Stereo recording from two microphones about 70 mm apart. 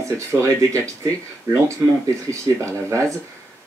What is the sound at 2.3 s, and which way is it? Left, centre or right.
Speech, right.